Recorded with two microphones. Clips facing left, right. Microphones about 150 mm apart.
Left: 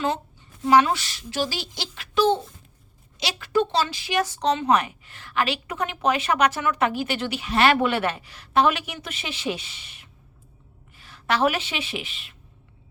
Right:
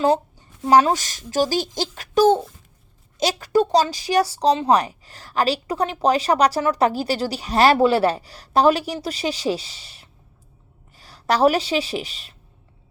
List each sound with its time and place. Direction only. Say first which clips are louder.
0.0 s speech: right 7 dB; 35° right (ahead or behind)